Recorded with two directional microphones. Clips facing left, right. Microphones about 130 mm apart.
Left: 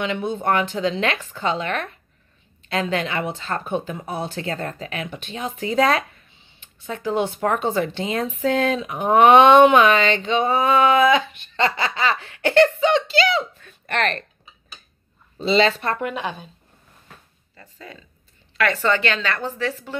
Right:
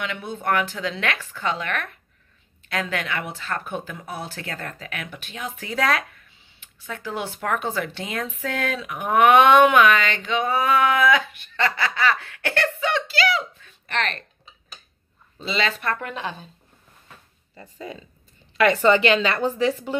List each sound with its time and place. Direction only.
0.0 s speech: 25° left (ahead or behind)
13.6 s giggle: 50° left (ahead or behind)
15.3 s speech: 30° left (ahead or behind)
16.0 s a woman's voice: 15° left (ahead or behind)
17.6 s a woman's voice: 15° right (ahead or behind)